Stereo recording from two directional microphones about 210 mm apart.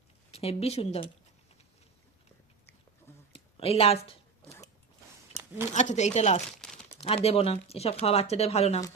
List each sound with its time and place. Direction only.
0.3 s speech: 30° left (ahead or behind)
3.3 s a sound: 30° left (ahead or behind)
5.7 s speech: 35° left (ahead or behind)
6.6 s crumpling: centre (ahead or behind)
7.0 s speech: 30° left (ahead or behind)